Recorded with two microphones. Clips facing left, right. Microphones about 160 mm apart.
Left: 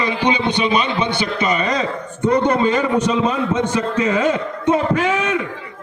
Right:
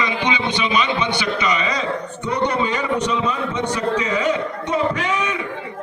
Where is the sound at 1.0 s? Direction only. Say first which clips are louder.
Left 2 dB; 50° left (ahead or behind).